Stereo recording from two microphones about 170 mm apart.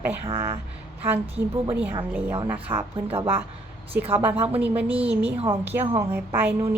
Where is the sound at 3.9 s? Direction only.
10° right (ahead or behind).